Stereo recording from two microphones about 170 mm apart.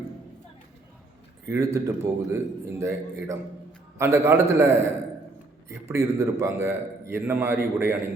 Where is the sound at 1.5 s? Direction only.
15° right (ahead or behind).